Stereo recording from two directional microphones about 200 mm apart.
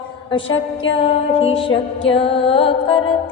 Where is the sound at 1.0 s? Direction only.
30° left (ahead or behind).